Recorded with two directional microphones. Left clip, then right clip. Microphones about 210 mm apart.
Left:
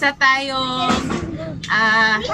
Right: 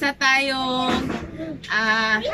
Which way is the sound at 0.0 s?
5° right (ahead or behind).